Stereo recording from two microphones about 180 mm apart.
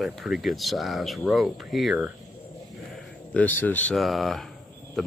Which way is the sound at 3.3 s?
10° left (ahead or behind).